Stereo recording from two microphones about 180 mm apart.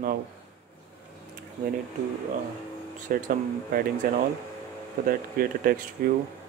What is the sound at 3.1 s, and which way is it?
Speech, 50° right (ahead or behind).